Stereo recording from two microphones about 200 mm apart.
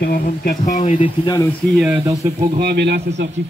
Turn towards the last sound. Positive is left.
turn(degrees=-60)  # may be behind; listen again after turning